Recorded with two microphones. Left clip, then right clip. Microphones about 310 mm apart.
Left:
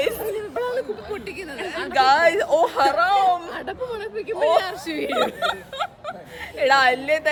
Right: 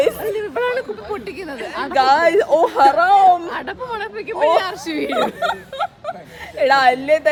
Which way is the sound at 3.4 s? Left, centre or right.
Centre.